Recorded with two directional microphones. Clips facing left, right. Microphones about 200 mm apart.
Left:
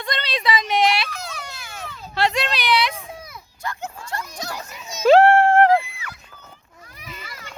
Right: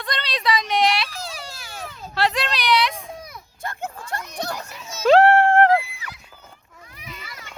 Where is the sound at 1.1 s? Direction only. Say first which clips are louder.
Even; 30° right (ahead or behind).